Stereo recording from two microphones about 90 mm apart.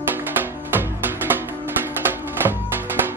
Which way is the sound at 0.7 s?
25° right (ahead or behind).